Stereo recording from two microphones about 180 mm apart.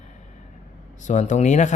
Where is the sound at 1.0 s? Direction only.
45° left (ahead or behind).